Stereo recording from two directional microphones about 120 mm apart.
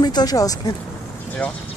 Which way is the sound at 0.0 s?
35° left (ahead or behind).